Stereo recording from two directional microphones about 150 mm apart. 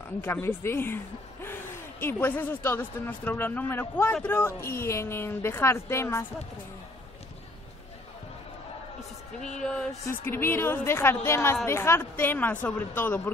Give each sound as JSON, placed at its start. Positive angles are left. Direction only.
{"t": 0.2, "sound": "speech", "side_deg": 15}
{"t": 9.4, "sound": "music", "side_deg": 5}
{"t": 10.0, "sound": "speech", "side_deg": 15}